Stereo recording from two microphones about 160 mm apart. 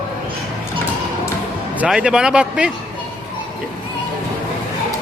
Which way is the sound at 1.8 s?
5° right (ahead or behind).